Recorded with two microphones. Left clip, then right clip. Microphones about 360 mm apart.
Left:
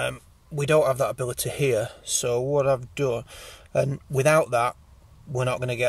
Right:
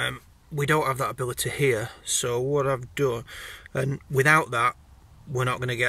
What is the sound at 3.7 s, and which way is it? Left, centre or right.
Speech, centre.